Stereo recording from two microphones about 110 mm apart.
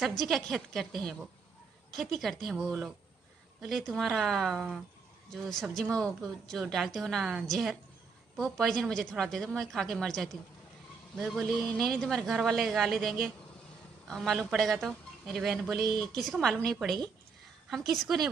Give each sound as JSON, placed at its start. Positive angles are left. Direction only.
{"t": 0.3, "sound": "a woman's voice", "side_deg": 0}
{"t": 17.6, "sound": "a woman's voice", "side_deg": 0}